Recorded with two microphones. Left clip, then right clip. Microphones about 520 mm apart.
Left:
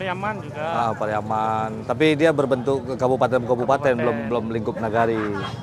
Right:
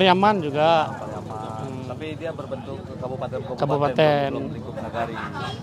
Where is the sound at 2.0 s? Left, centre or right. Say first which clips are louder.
Left 17 dB; left.